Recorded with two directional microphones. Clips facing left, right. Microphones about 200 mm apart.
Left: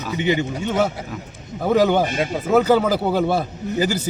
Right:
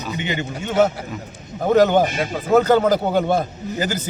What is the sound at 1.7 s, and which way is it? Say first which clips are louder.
A man's voice: right 2 dB; 10° left (ahead or behind).